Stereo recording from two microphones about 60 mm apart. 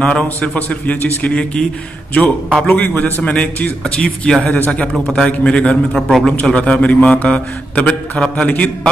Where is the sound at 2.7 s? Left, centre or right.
Left.